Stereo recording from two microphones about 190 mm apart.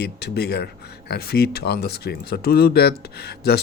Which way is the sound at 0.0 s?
60° left (ahead or behind).